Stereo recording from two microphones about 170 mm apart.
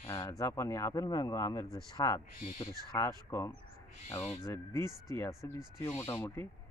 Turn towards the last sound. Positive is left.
turn(degrees=15)  # may be behind; listen again after turning